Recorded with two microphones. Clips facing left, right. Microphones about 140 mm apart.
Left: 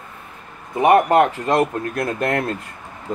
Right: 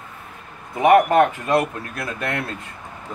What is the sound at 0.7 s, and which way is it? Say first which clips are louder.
Speech: even; 30° left (ahead or behind).